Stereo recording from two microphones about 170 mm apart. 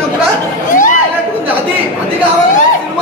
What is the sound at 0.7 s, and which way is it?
Chatter, 50° left (ahead or behind).